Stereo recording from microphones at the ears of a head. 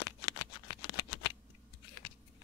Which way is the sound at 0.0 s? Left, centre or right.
Left.